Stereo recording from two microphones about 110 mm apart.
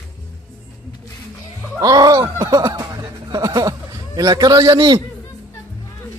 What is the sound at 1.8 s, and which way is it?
Speech, 35° right (ahead or behind).